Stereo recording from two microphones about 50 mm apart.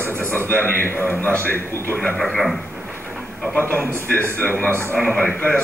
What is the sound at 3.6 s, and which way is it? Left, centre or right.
A man's voice, left.